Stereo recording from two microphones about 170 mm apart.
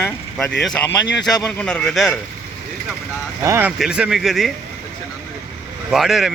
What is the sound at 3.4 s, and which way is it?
Speech, 15° right (ahead or behind).